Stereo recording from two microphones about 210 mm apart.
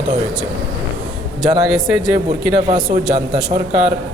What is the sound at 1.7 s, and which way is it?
Speech, centre (ahead or behind).